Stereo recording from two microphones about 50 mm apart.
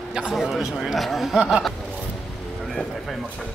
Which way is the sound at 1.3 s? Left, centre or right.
Centre.